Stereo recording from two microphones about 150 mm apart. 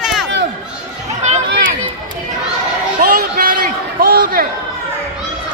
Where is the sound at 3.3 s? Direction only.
75° right (ahead or behind).